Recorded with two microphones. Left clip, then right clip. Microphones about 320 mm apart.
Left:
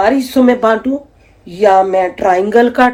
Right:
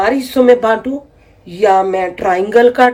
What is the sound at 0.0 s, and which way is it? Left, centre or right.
Speech, centre.